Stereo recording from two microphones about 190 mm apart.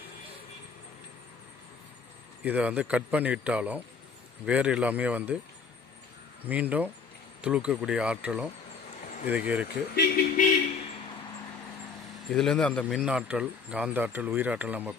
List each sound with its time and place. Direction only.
2.4 s speech: 5° right (ahead or behind)
6.4 s speech: 10° right (ahead or behind)
9.9 s speech: 55° left (ahead or behind)
12.3 s speech: centre (ahead or behind)
13.0 s speech: 5° right (ahead or behind)